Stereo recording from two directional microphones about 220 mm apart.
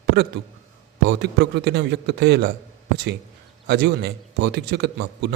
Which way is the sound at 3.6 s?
50° right (ahead or behind).